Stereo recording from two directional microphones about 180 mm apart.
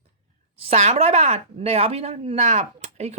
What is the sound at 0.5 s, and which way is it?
A woman's voice, 35° right (ahead or behind).